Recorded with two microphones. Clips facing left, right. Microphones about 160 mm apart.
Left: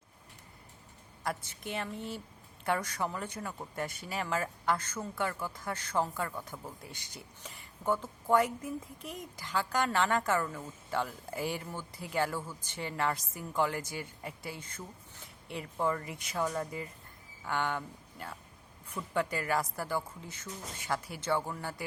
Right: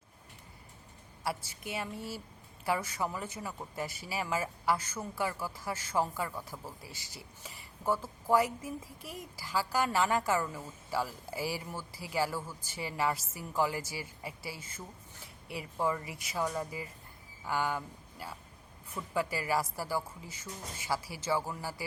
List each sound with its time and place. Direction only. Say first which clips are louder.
1.2 s a woman's voice: even; 5° right (ahead or behind)